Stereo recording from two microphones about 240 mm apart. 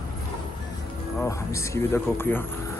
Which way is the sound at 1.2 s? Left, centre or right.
Centre.